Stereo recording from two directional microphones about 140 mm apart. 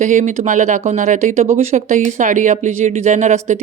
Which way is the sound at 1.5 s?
50° right (ahead or behind).